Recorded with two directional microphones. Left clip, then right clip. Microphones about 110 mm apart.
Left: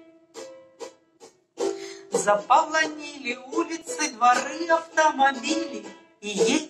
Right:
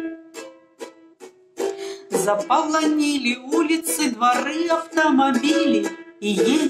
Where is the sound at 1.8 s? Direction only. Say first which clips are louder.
Right 3 dB; 30° right (ahead or behind).